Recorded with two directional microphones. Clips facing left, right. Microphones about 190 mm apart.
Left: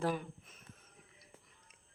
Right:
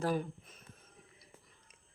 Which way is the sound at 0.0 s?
40° right (ahead or behind).